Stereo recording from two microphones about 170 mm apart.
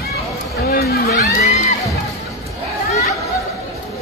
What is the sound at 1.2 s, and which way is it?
Music, 40° left (ahead or behind).